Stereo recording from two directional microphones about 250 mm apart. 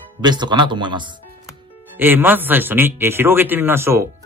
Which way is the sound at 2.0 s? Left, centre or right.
Centre.